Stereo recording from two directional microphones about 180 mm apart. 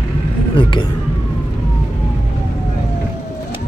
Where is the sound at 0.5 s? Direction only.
30° left (ahead or behind).